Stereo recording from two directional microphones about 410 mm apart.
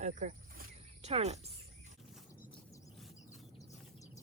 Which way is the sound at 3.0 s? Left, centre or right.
Centre.